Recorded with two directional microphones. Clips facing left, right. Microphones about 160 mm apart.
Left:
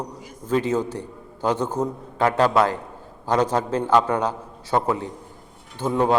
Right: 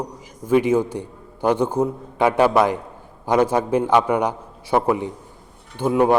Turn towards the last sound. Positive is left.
turn(degrees=-10)  # may be behind; listen again after turning